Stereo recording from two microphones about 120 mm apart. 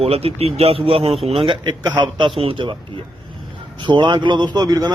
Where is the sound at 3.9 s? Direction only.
40° right (ahead or behind).